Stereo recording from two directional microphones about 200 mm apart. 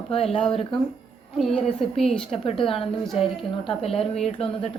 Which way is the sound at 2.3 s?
30° left (ahead or behind).